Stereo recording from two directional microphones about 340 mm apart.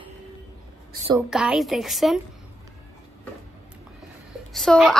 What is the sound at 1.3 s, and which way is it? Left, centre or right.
Speech, centre.